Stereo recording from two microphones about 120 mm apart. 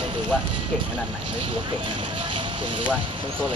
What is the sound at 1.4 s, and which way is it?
Speech, 45° right (ahead or behind).